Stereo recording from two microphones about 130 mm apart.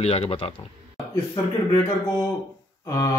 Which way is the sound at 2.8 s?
25° left (ahead or behind).